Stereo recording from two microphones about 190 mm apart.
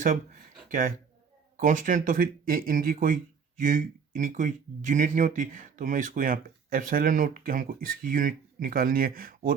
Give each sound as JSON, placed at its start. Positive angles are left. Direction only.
{"t": 0.0, "sound": "speech", "side_deg": -45}